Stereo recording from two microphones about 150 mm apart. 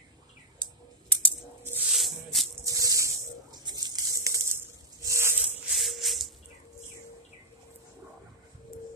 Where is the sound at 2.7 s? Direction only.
20° right (ahead or behind).